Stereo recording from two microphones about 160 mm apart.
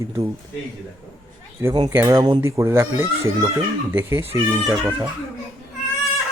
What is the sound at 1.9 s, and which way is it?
Speech, 20° right (ahead or behind).